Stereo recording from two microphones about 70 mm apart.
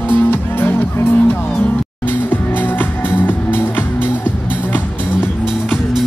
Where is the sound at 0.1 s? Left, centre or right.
Left.